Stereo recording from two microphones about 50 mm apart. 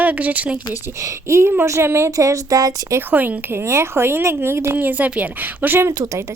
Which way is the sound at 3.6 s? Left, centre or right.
Right.